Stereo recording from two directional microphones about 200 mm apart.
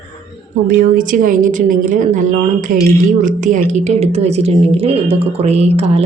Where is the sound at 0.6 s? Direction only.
45° right (ahead or behind).